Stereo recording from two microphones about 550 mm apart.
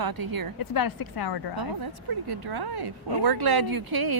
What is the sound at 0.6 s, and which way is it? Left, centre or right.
Speech, left.